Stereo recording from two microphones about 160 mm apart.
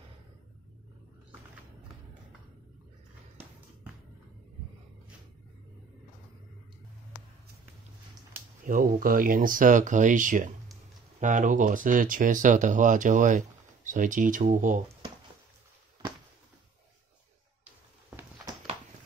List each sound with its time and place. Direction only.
8.6 s speech: 60° right (ahead or behind)